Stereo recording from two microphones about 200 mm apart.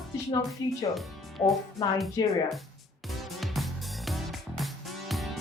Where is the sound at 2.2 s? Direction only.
20° left (ahead or behind).